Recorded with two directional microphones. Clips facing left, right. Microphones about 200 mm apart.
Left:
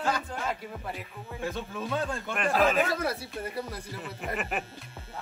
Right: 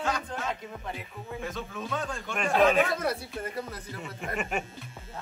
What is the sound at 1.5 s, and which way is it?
Speech, 30° left (ahead or behind).